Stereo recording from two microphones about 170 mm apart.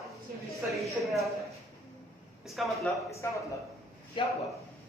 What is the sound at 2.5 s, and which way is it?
Speech, centre (ahead or behind).